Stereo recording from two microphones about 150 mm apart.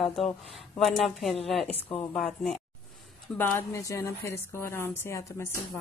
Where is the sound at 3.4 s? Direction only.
15° left (ahead or behind).